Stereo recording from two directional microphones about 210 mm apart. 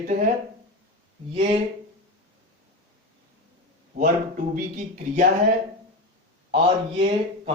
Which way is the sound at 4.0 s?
40° right (ahead or behind).